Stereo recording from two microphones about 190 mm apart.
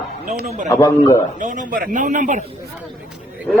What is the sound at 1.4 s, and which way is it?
Speech, 40° right (ahead or behind).